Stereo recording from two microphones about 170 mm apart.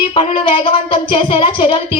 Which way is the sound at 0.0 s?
30° left (ahead or behind).